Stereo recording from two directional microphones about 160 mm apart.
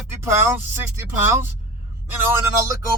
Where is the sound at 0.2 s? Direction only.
15° right (ahead or behind).